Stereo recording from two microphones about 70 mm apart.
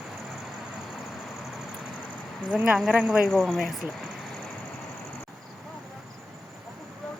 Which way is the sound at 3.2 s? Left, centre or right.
Centre.